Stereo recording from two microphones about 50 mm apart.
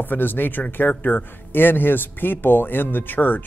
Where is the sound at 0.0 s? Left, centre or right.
Left.